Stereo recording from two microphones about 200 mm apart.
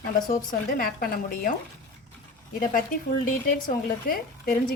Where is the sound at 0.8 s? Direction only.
45° left (ahead or behind).